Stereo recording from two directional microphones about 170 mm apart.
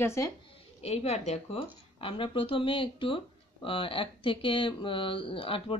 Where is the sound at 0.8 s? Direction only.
40° left (ahead or behind).